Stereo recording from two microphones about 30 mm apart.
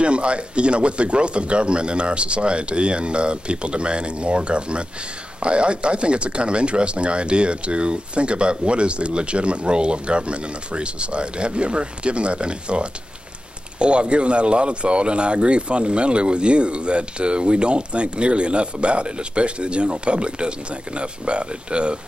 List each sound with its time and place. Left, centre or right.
0.0 s speech: right